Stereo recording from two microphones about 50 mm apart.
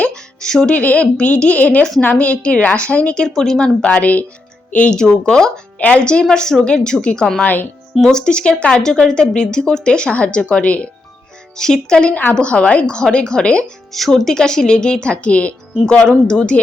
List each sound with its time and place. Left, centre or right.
0.1 s music: centre
0.7 s a woman's voice: left
3.2 s speech: centre; by 4.9 s left
4.9 s a woman's voice: centre
7.4 s speech: left
8.0 s a woman's voice: centre
11.5 s a woman's voice: centre
13.9 s a woman's voice: centre; by 16.6 s left